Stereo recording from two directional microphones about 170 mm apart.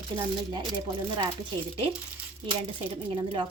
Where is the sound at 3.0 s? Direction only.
30° right (ahead or behind).